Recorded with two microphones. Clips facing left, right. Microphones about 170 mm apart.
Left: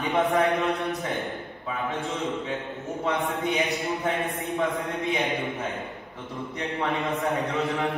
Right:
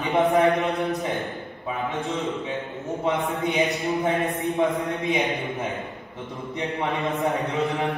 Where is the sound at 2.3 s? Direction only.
20° right (ahead or behind).